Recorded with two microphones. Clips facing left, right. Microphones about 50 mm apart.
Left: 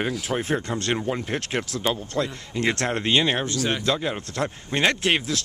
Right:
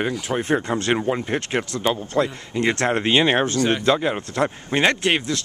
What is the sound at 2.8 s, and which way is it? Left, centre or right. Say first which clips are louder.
Speech: right 5 dB; centre.